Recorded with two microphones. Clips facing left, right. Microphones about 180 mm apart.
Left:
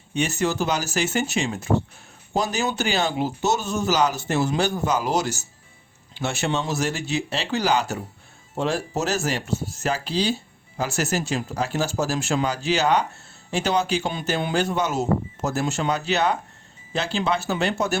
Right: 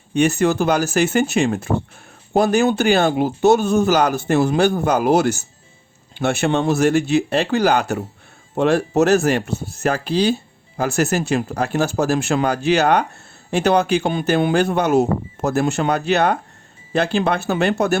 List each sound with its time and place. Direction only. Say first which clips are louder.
0.1 s speech: right 7 dB; 55° right (ahead or behind)